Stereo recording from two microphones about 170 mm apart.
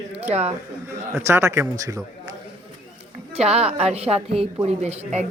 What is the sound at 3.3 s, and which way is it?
A woman's voice, 40° right (ahead or behind).